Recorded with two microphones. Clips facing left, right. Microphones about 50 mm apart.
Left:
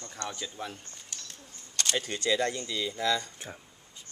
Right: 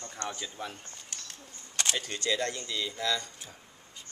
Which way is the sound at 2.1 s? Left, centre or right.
Centre.